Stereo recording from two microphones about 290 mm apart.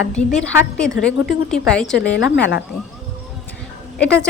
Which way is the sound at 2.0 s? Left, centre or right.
Left.